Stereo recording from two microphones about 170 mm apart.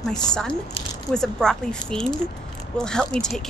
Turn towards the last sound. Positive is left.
turn(degrees=5)  # may be behind; listen again after turning